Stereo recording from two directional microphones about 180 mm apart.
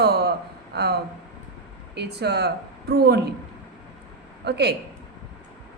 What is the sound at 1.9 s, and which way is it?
A woman's voice, 65° right (ahead or behind).